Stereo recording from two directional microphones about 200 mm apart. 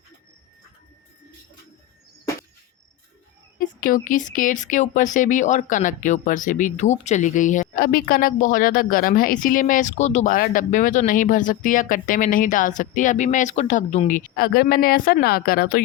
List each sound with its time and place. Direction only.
3.6 s speech: 40° left (ahead or behind)